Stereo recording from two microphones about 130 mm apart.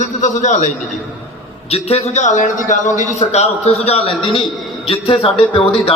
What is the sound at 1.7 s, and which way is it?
A man's voice, 55° left (ahead or behind).